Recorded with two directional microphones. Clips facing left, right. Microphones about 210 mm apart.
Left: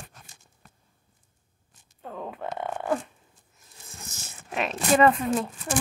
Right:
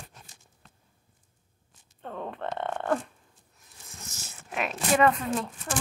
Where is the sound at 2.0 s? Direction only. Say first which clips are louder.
Even; 5° left (ahead or behind).